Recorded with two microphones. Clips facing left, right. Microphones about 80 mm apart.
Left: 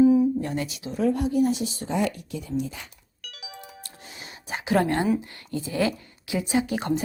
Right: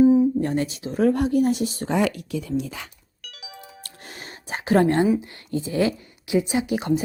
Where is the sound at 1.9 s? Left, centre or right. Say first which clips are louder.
Right 4 dB; right.